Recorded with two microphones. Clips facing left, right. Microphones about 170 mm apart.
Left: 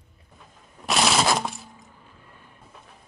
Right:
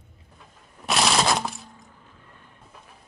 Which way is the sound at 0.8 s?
Centre (ahead or behind).